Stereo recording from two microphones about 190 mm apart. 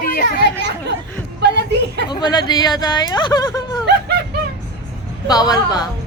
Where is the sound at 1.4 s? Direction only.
60° right (ahead or behind).